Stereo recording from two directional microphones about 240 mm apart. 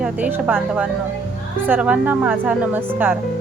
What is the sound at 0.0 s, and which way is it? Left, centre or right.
A woman's voice, centre.